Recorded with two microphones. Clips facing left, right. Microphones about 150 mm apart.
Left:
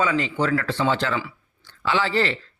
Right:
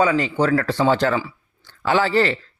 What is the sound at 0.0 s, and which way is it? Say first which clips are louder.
Speech: right 4 dB; 40° right (ahead or behind).